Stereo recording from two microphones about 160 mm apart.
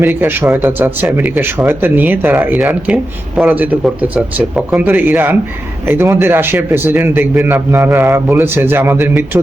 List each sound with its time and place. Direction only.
0.0 s speech: 15° right (ahead or behind)